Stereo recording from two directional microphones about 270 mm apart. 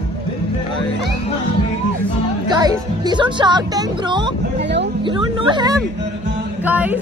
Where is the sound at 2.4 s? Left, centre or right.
Centre.